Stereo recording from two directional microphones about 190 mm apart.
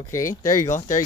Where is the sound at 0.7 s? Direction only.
40° left (ahead or behind).